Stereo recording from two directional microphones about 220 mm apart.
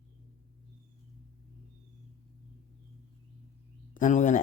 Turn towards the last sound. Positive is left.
turn(degrees=35)  # may be behind; listen again after turning